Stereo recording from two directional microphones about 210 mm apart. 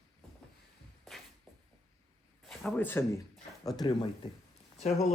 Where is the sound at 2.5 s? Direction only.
5° left (ahead or behind).